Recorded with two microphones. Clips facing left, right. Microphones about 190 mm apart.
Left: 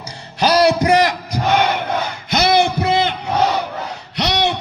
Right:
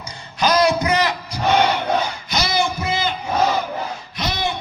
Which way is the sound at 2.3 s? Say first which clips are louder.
Left 7 dB; 60° left (ahead or behind).